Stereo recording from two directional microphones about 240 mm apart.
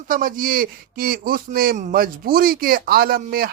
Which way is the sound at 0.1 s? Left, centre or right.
Right.